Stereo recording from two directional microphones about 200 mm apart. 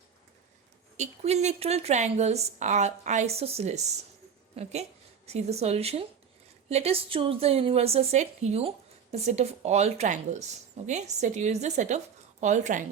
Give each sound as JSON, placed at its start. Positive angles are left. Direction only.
{"t": 0.9, "sound": "a woman's voice", "side_deg": -35}